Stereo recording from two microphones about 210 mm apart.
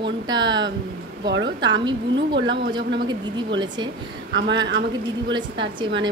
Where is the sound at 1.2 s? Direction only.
55° right (ahead or behind).